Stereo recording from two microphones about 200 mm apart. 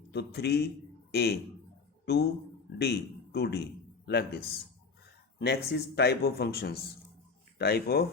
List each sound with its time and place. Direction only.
0.1 s a man's voice: 55° left (ahead or behind)